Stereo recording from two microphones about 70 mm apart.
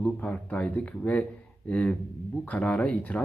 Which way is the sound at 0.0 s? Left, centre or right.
Centre.